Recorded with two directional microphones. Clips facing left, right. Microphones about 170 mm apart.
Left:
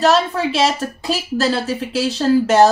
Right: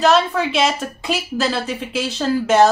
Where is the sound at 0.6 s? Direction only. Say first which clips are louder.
Left 1 dB; 35° left (ahead or behind).